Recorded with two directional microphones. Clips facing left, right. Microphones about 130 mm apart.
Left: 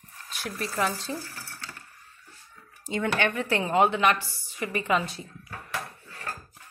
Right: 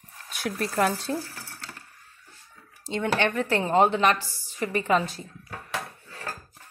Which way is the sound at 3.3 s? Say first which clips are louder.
Right 2 dB; 40° right (ahead or behind).